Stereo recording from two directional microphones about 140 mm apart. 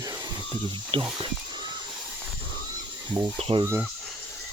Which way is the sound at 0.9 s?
40° right (ahead or behind).